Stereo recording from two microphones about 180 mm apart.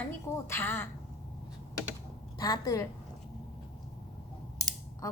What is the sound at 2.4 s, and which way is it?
Speech, 20° left (ahead or behind).